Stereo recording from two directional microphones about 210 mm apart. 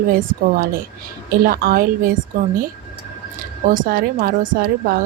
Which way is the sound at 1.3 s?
45° right (ahead or behind).